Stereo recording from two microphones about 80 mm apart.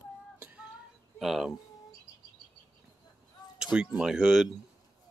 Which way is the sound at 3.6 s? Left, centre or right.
Centre.